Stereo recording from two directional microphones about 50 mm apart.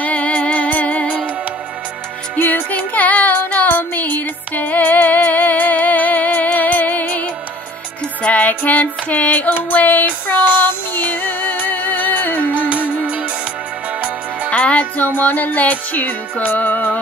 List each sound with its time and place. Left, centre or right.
0.0 s music: left
2.3 s music: left
12.4 s music: right
14.5 s music: left